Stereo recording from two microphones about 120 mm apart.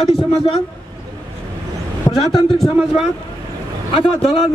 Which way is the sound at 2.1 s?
35° left (ahead or behind).